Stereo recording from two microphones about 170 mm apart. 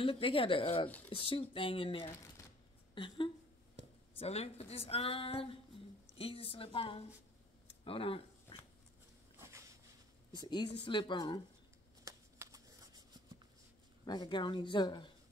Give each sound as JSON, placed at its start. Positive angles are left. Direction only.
{"t": 0.0, "sound": "speech", "side_deg": 30}
{"t": 0.8, "sound": "speech", "side_deg": 10}
{"t": 1.1, "sound": "a woman's voice", "side_deg": 30}
{"t": 7.8, "sound": "a sound", "side_deg": 30}
{"t": 9.4, "sound": "a sound", "side_deg": -15}
{"t": 10.4, "sound": "speech", "side_deg": 25}
{"t": 12.0, "sound": "shuffling cards", "side_deg": -20}
{"t": 14.0, "sound": "speech", "side_deg": 25}